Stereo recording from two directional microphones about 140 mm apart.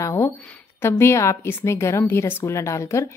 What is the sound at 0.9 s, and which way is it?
A woman's voice, 20° left (ahead or behind).